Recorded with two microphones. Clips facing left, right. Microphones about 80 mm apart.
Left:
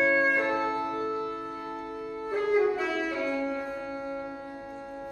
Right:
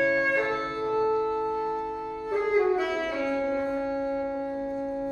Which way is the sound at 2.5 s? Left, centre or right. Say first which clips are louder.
Right 1 dB; centre.